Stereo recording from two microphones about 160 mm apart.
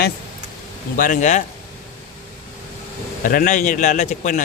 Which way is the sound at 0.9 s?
60° left (ahead or behind).